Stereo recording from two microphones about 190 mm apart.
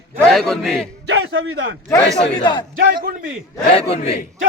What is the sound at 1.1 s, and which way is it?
Speech, 90° right.